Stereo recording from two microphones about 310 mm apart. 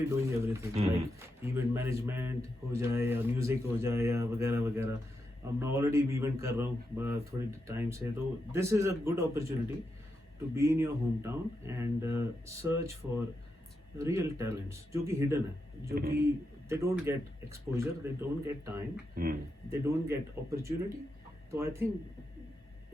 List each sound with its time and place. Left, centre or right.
0.1 s a man's voice: centre
0.8 s speech: right
1.4 s a man's voice: centre
16.0 s speech: right
16.2 s a man's voice: centre
19.1 s speech: right
19.7 s a man's voice: centre